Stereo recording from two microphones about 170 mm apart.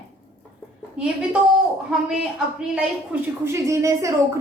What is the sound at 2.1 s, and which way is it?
A woman's voice, 5° right (ahead or behind).